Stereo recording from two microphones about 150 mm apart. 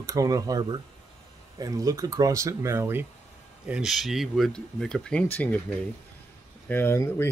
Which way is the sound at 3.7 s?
Centre (ahead or behind).